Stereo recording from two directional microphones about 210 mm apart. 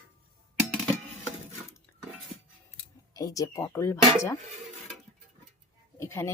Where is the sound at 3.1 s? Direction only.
15° left (ahead or behind).